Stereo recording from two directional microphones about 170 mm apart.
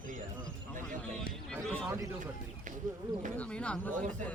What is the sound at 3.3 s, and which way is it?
Speech, 5° left (ahead or behind).